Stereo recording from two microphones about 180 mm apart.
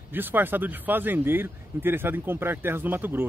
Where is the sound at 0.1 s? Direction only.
10° right (ahead or behind).